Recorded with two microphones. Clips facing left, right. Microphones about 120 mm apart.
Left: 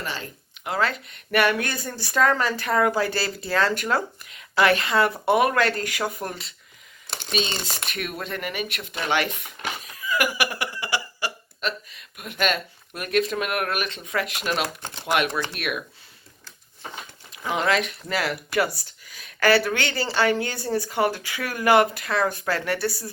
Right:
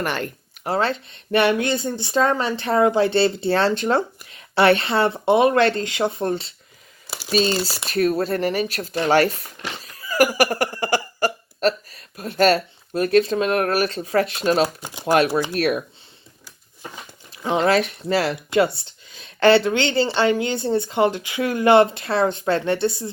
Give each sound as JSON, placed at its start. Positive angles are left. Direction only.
{"t": 0.0, "sound": "speech", "side_deg": -60}
{"t": 0.6, "sound": "speech", "side_deg": -30}
{"t": 14.8, "sound": "speech", "side_deg": -10}
{"t": 15.0, "sound": "speech", "side_deg": -35}
{"t": 17.3, "sound": "speech", "side_deg": -30}